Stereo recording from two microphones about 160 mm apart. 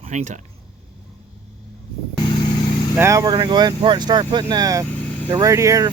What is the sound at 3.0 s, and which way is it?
Speech, 20° right (ahead or behind).